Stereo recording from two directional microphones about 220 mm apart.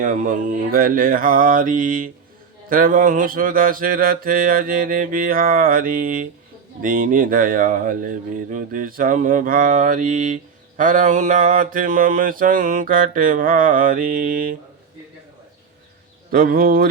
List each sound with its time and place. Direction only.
0.0 s speech: 35° right (ahead or behind)
16.3 s speech: 40° right (ahead or behind)